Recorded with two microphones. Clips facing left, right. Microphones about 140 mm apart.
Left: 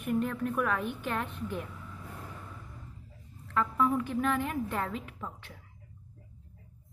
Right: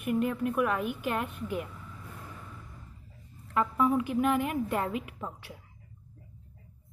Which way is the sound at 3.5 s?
10° right (ahead or behind).